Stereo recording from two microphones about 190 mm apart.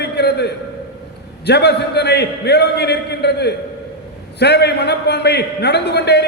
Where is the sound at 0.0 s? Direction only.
60° left (ahead or behind).